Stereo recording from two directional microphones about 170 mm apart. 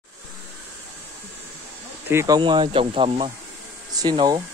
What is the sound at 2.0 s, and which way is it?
Speech, 20° right (ahead or behind).